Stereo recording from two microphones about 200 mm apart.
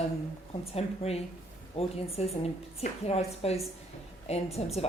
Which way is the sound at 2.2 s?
35° left (ahead or behind).